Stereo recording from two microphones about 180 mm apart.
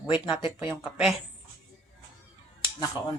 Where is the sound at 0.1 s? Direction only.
30° left (ahead or behind).